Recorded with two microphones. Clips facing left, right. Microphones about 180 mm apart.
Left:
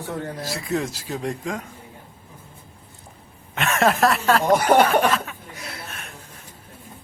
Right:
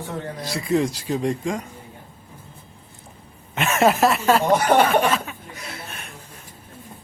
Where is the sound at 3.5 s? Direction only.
Centre (ahead or behind).